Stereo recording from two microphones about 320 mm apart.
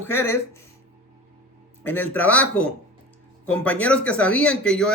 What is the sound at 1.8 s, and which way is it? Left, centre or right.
Speech, centre.